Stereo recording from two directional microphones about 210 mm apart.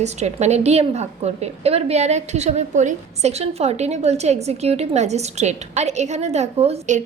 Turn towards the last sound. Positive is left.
turn(degrees=-35)  # may be behind; listen again after turning